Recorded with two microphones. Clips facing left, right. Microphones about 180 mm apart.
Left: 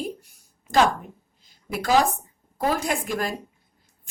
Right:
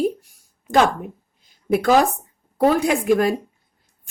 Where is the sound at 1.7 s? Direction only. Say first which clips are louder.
Right 5 dB; 55° right (ahead or behind).